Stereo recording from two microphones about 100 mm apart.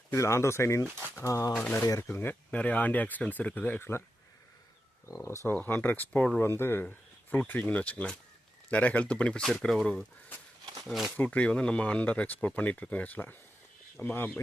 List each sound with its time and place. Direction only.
0.1 s speech: 30° left (ahead or behind)
1.5 s speech: 20° left (ahead or behind)
1.8 s speech: 35° left (ahead or behind)
2.0 s speech: 20° left (ahead or behind)
5.0 s speech: 30° left (ahead or behind); by 6.4 s 10° left (ahead or behind)
6.4 s speech: 25° left (ahead or behind); by 11.1 s centre (ahead or behind)
11.2 s speech: 15° left (ahead or behind)